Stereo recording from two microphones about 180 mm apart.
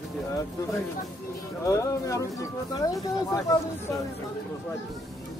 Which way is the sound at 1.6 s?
15° left (ahead or behind).